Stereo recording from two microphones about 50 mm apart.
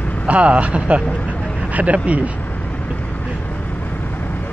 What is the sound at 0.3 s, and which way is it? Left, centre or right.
Speech, right.